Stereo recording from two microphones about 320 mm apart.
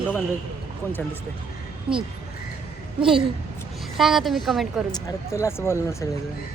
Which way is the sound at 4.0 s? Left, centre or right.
Centre.